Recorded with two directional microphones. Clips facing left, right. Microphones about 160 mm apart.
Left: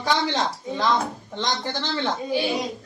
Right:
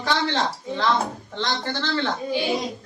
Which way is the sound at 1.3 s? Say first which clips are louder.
Even; 15° left (ahead or behind).